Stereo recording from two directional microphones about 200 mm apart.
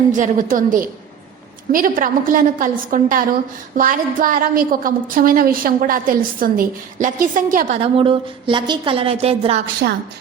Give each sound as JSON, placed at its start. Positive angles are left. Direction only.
{"t": 0.2, "sound": "a woman's voice", "side_deg": -40}
{"t": 7.9, "sound": "a woman's voice", "side_deg": -25}
{"t": 9.8, "sound": "a woman's voice", "side_deg": -55}